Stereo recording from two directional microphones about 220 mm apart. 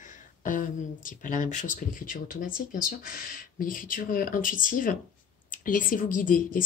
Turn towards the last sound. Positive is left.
turn(degrees=40)  # may be behind; listen again after turning